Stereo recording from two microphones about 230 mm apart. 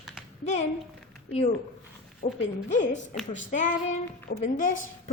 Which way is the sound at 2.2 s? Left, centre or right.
Left.